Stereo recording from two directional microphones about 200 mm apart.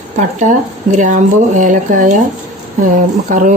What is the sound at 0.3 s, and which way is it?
Speech, 35° right (ahead or behind).